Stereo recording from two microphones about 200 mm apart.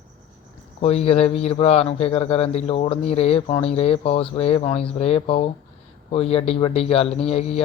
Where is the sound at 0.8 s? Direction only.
30° left (ahead or behind).